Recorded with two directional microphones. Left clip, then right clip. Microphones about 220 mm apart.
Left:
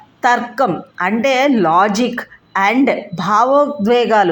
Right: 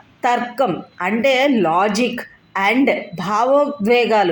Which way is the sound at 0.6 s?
15° left (ahead or behind).